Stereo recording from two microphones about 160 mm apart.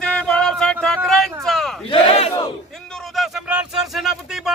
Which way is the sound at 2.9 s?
Centre (ahead or behind).